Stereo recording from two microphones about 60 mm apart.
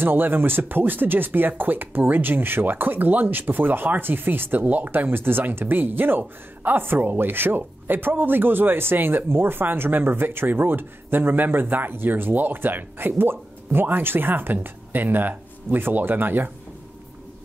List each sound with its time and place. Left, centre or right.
0.0 s speech: right